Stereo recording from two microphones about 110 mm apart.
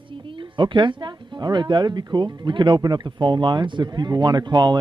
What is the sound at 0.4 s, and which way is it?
Speech, 45° right (ahead or behind).